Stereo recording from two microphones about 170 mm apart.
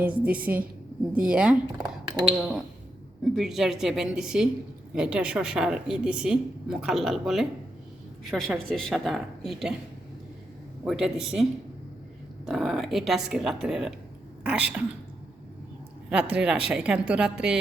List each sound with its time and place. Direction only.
0.0 s a woman's voice: 10° right (ahead or behind)
1.8 s a sound: 25° right (ahead or behind)
2.3 s a woman's voice: 5° right (ahead or behind)
10.8 s a woman's voice: 5° right (ahead or behind)
12.5 s a woman's voice: centre (ahead or behind)
16.0 s a woman's voice: 5° right (ahead or behind)